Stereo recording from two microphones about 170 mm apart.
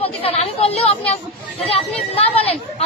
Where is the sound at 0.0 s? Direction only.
35° left (ahead or behind).